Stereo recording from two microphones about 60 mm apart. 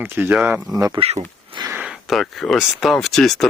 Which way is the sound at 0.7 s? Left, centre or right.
Right.